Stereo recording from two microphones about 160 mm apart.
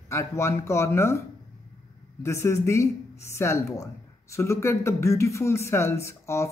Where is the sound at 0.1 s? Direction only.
20° left (ahead or behind).